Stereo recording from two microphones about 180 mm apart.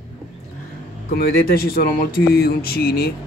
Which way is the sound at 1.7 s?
55° left (ahead or behind).